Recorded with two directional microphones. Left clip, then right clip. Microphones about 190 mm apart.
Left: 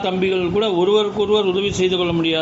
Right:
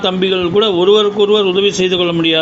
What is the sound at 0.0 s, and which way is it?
A man's voice, 20° right (ahead or behind).